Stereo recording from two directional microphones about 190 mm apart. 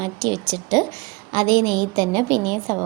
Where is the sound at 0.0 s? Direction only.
20° right (ahead or behind).